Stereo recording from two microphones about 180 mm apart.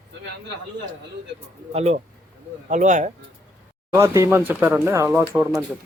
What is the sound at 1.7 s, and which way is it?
Speech, 40° right (ahead or behind).